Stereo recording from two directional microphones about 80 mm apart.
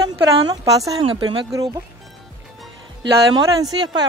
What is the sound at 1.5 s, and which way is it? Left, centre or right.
Speech, right.